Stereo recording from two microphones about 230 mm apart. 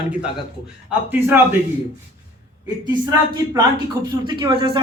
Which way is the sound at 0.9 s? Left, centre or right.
Centre.